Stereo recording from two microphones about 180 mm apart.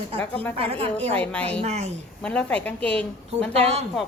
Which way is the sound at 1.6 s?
35° right (ahead or behind).